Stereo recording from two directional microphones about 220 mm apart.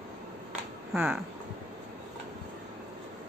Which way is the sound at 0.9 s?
5° right (ahead or behind).